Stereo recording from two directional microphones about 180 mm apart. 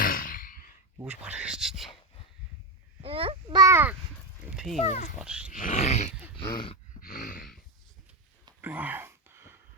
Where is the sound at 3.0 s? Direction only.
30° right (ahead or behind); by 4.0 s 10° right (ahead or behind).